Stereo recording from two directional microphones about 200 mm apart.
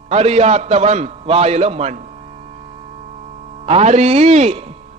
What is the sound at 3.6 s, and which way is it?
A man's voice, 30° right (ahead or behind).